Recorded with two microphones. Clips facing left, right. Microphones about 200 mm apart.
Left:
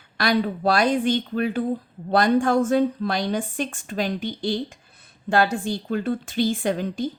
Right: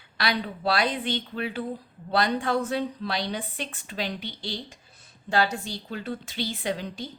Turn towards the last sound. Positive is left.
turn(degrees=50)  # may be behind; listen again after turning